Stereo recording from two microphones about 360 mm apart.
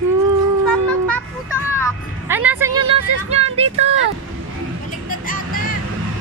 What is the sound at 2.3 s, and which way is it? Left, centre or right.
Speech, centre.